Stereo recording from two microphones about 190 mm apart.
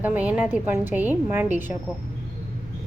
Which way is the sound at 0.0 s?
10° right (ahead or behind).